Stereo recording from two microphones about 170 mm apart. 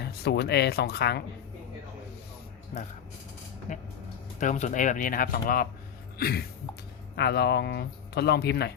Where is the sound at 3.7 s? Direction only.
45° left (ahead or behind).